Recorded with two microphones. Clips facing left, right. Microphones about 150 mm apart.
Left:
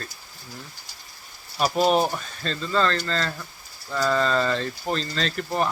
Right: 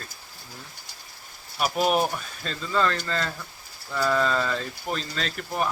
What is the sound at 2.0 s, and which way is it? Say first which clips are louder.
Speech: left 2 dB; 5° right (ahead or behind).